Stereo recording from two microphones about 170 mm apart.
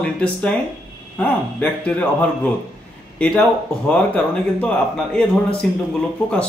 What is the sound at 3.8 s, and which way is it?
Speech, 5° left (ahead or behind).